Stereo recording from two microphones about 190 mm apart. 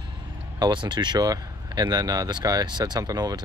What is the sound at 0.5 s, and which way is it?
Speech, 25° right (ahead or behind).